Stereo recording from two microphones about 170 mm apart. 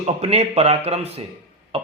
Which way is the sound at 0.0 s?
35° right (ahead or behind).